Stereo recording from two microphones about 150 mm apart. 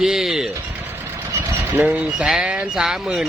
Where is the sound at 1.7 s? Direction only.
10° right (ahead or behind).